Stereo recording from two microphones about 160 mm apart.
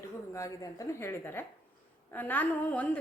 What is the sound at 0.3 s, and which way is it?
A woman's voice, 20° left (ahead or behind).